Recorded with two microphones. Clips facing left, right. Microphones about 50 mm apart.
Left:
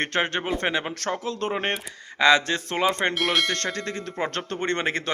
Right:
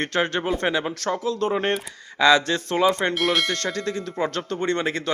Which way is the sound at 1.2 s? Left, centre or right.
Left.